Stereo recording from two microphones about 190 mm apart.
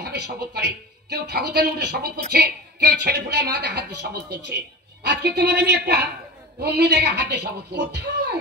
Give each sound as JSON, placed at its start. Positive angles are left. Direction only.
{"t": 0.0, "sound": "speech", "side_deg": -60}